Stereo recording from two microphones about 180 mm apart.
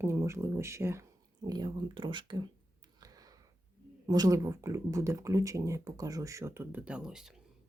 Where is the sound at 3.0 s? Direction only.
20° right (ahead or behind).